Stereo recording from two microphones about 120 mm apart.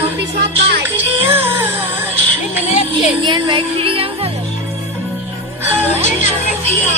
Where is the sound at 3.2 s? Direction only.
40° right (ahead or behind).